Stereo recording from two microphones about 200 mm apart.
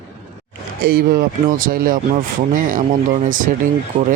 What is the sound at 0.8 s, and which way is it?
Speech, 50° right (ahead or behind).